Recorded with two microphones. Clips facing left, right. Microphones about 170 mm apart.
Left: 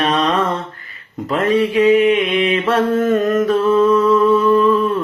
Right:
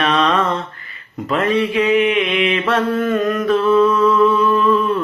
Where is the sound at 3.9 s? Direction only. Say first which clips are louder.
Left 2 dB; 40° left (ahead or behind).